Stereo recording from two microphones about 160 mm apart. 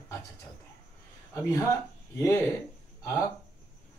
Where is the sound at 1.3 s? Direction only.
15° left (ahead or behind).